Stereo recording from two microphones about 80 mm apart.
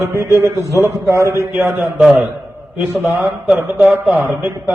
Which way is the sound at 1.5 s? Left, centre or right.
Right.